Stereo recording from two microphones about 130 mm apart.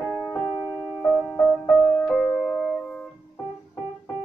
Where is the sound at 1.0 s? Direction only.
Centre (ahead or behind).